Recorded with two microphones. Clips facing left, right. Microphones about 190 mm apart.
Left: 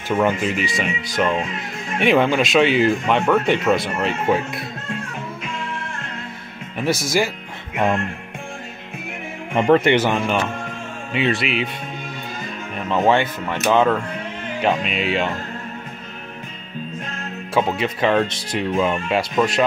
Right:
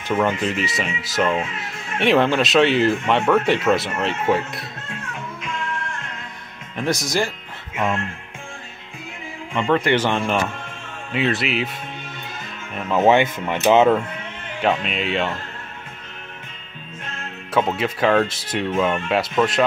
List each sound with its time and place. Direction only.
0.1 s speech: 10° left (ahead or behind)
6.8 s speech: 5° left (ahead or behind)
7.7 s music: 40° left (ahead or behind)
9.5 s speech: 40° left (ahead or behind)
9.9 s speech: 5° left (ahead or behind)
12.7 s music: centre (ahead or behind)
13.0 s speech: 20° right (ahead or behind)
14.6 s speech: centre (ahead or behind)
17.6 s speech: centre (ahead or behind)